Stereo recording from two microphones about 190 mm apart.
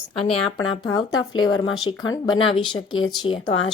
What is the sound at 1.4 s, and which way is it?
Speech, 90° left.